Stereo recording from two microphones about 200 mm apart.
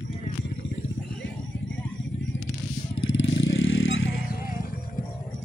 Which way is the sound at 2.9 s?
70° left (ahead or behind).